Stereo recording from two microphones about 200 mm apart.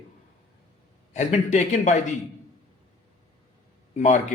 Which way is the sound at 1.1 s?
35° left (ahead or behind).